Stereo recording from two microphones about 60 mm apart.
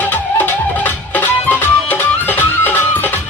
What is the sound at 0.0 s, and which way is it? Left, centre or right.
Music, left.